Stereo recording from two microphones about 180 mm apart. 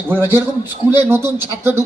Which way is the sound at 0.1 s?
10° right (ahead or behind).